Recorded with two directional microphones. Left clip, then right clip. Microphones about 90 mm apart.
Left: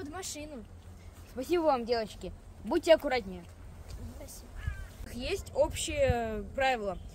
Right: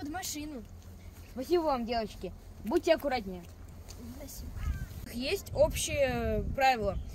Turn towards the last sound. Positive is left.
turn(degrees=15)  # may be behind; listen again after turning